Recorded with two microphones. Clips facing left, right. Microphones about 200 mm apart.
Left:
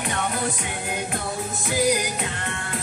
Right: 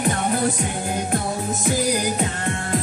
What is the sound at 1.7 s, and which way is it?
Music, 40° right (ahead or behind).